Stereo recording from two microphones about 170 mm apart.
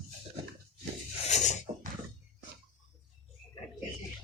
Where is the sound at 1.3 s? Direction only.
45° left (ahead or behind).